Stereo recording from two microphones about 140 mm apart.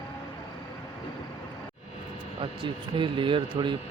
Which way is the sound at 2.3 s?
35° right (ahead or behind).